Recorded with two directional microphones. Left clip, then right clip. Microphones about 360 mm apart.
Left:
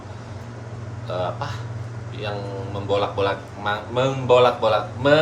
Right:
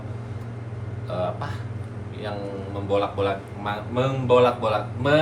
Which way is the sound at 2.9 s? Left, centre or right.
Centre.